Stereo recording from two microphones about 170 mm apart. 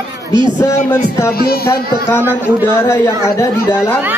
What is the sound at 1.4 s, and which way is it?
Speech, 65° left (ahead or behind).